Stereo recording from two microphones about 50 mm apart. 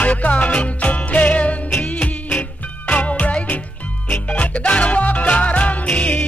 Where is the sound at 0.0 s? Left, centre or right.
Left.